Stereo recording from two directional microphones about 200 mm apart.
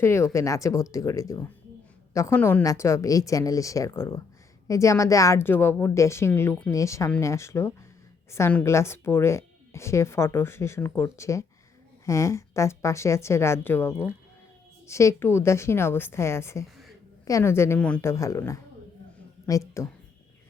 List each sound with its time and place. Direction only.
0.0 s a woman's voice: 15° left (ahead or behind)